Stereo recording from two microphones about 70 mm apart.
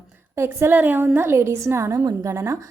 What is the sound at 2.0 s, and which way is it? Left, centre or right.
Speech, right.